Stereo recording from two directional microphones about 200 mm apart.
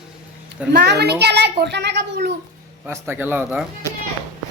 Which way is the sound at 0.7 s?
55° right (ahead or behind).